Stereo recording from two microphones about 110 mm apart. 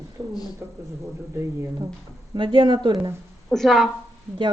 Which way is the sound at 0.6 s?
20° right (ahead or behind).